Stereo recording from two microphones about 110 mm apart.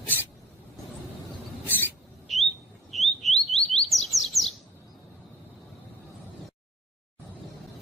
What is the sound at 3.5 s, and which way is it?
Chirp, 70° left (ahead or behind).